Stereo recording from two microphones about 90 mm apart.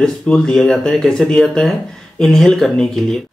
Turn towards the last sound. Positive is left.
turn(degrees=5)  # may be behind; listen again after turning